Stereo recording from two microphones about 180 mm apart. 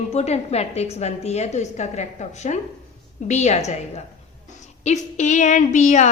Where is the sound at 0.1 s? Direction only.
35° left (ahead or behind).